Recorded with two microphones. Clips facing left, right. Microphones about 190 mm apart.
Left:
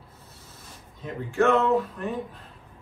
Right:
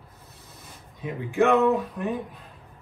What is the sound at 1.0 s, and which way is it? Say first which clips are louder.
Speech: right 1 dB; 15° right (ahead or behind).